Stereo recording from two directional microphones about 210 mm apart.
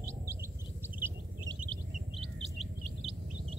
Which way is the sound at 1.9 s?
35° right (ahead or behind).